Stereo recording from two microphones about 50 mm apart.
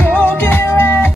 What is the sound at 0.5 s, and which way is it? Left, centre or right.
Music, left.